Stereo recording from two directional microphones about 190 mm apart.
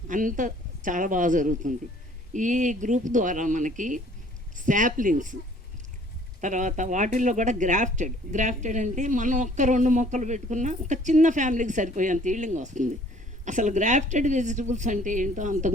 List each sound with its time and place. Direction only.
0.1 s a woman's voice: 45° right (ahead or behind)
6.4 s speech: 40° right (ahead or behind)